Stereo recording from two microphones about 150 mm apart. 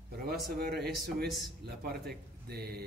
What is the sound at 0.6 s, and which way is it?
Speech, 90° right.